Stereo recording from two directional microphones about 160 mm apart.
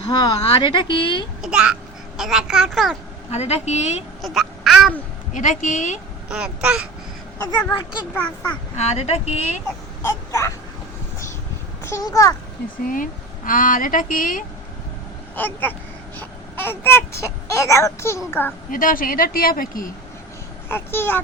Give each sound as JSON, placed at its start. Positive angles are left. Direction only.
{"t": 0.2, "sound": "a woman's voice", "side_deg": 30}
{"t": 1.4, "sound": "a child's voice", "side_deg": -5}
{"t": 3.3, "sound": "speech", "side_deg": 40}
{"t": 4.2, "sound": "a sound", "side_deg": 0}
{"t": 5.3, "sound": "speech", "side_deg": 50}
{"t": 6.3, "sound": "a woman's voice", "side_deg": -5}
{"t": 8.7, "sound": "speech", "side_deg": 45}
{"t": 10.0, "sound": "a sound", "side_deg": 20}
{"t": 11.9, "sound": "a child's voice", "side_deg": 20}
{"t": 12.8, "sound": "a woman's voice", "side_deg": 60}
{"t": 15.4, "sound": "speech", "side_deg": 10}
{"t": 18.7, "sound": "a woman's voice", "side_deg": 60}
{"t": 20.7, "sound": "speech", "side_deg": 15}